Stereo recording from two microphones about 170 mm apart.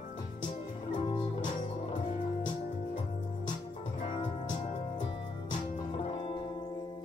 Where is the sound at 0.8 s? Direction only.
30° left (ahead or behind).